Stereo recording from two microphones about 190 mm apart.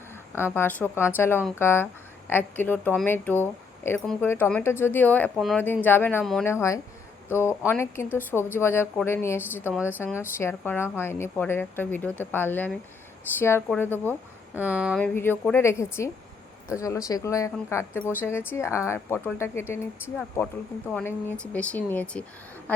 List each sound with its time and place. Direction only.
0.5 s a woman's voice: 10° left (ahead or behind)
14.5 s speech: 10° right (ahead or behind)
15.0 s a woman's voice: 10° left (ahead or behind)